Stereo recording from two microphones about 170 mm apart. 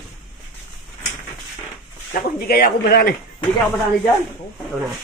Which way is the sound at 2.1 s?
55° left (ahead or behind).